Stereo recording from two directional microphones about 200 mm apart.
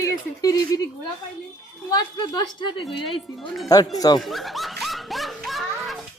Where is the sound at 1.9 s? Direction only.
20° left (ahead or behind).